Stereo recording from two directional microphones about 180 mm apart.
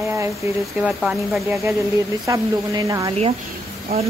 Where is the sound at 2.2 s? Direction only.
20° right (ahead or behind).